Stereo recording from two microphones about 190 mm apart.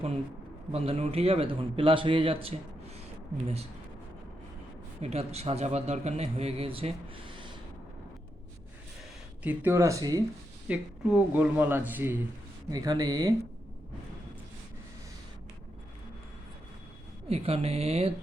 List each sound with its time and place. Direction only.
0.7 s a man's voice: 30° right (ahead or behind)
5.0 s a man's voice: 35° right (ahead or behind)
9.4 s speech: 10° right (ahead or behind)
10.7 s speech: 5° right (ahead or behind)
12.7 s speech: 20° right (ahead or behind)
17.2 s speech: 30° right (ahead or behind)